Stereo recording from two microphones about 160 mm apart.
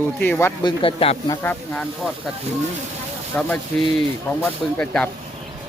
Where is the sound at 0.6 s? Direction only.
30° left (ahead or behind).